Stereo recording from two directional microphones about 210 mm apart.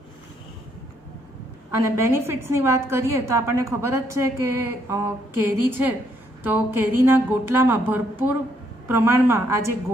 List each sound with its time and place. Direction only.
1.8 s a woman's voice: 15° right (ahead or behind)